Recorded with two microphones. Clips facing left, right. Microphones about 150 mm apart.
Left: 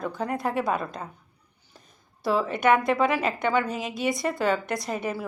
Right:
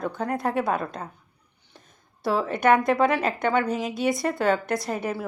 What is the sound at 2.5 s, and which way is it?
Speech, 50° right (ahead or behind).